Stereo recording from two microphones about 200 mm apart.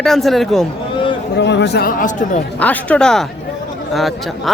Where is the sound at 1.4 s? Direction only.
60° left (ahead or behind); by 2.4 s 40° left (ahead or behind).